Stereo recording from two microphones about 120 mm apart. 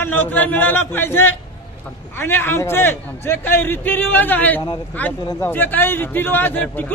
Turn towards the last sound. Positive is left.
turn(degrees=15)  # may be behind; listen again after turning